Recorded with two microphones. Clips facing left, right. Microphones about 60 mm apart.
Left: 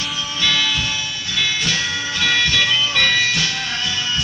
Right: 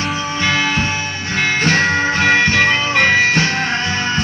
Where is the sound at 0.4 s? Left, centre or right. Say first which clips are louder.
Right 3 dB; right.